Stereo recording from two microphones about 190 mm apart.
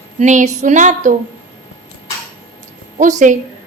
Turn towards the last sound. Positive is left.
turn(degrees=-40)  # may be behind; listen again after turning